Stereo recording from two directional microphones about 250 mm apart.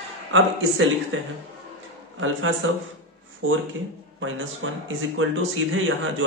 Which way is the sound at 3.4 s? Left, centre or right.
Right.